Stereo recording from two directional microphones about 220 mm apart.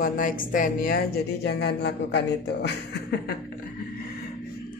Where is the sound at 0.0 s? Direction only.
40° left (ahead or behind).